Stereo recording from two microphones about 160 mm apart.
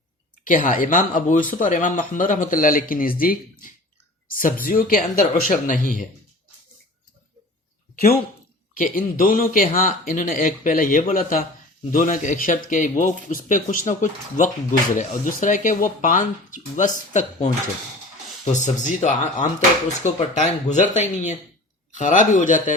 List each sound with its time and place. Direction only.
0.4 s speech: 55° left (ahead or behind)
8.8 s speech: 60° left (ahead or behind)